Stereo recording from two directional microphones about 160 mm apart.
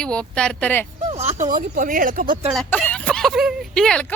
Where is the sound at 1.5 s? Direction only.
60° right (ahead or behind).